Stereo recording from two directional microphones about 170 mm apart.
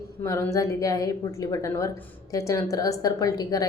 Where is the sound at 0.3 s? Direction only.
15° left (ahead or behind).